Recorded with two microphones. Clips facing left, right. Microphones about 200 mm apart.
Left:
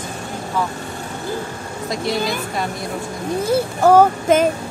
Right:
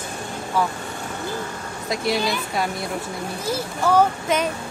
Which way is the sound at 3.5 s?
50° left (ahead or behind).